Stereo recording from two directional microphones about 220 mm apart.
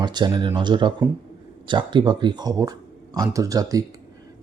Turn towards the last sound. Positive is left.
turn(degrees=-15)  # may be behind; listen again after turning